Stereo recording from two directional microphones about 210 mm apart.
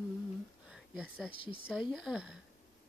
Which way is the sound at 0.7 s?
Centre (ahead or behind).